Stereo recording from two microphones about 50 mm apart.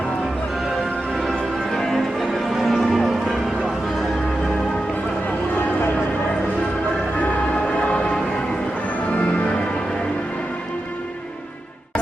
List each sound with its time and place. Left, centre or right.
1.3 s music: centre
7.8 s music: centre